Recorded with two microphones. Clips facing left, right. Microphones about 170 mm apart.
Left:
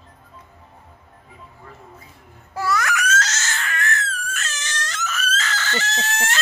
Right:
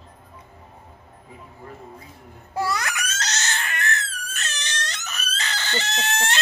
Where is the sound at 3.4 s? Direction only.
25° right (ahead or behind).